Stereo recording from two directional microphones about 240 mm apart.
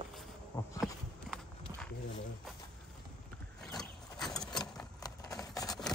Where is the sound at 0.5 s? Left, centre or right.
Centre.